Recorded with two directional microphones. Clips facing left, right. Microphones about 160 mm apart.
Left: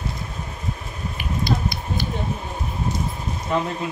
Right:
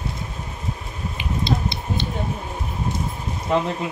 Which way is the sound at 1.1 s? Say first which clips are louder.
Even; 25° right (ahead or behind).